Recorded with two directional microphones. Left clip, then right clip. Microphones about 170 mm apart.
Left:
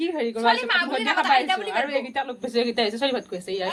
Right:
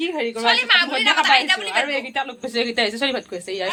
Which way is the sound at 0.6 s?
65° left (ahead or behind).